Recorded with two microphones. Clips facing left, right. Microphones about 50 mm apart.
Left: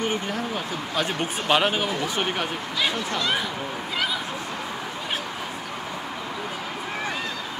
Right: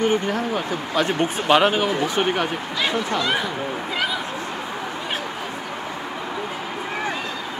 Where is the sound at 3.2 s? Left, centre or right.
Centre.